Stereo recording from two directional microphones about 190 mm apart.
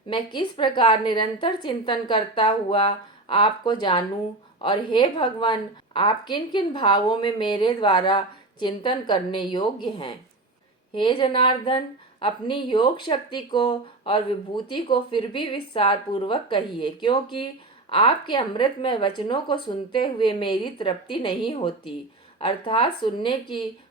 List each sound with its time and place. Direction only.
0.1 s speech: 25° left (ahead or behind)